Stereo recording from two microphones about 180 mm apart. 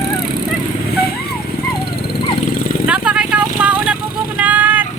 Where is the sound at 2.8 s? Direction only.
5° right (ahead or behind).